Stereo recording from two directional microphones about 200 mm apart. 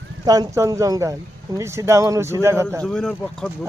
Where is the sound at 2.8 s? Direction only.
5° left (ahead or behind).